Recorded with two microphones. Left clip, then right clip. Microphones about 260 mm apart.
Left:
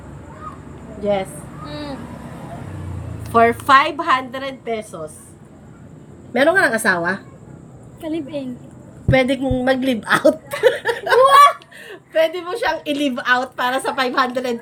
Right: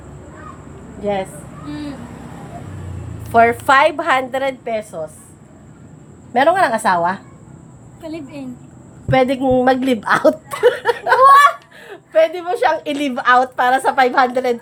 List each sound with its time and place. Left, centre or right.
1.0 s a woman's voice: centre
3.3 s a woman's voice: centre
6.3 s a woman's voice: centre
9.2 s a woman's voice: centre
10.2 s speech: right
11.9 s a woman's voice: centre